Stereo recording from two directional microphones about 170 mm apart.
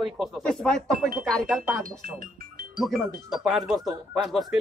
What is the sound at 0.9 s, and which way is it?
Speech, 55° right (ahead or behind).